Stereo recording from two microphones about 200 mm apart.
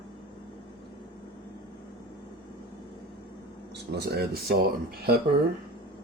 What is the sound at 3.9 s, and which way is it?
Speech, 55° right (ahead or behind).